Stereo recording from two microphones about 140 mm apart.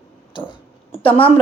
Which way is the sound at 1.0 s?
40° left (ahead or behind).